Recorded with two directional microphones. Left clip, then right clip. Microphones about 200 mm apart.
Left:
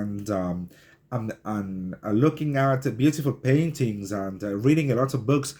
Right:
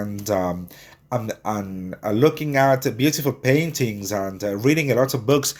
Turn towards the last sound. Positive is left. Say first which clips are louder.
# right 6 dB
turn(degrees=0)  # may be behind; listen again after turning